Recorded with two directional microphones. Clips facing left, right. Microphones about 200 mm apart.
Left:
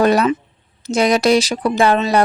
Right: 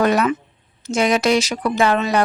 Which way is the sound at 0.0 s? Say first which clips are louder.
Left 3 dB; 35° left (ahead or behind).